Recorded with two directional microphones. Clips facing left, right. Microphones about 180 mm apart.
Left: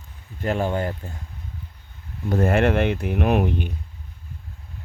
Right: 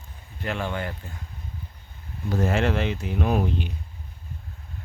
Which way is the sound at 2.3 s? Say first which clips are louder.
Left 4 dB; 55° left (ahead or behind).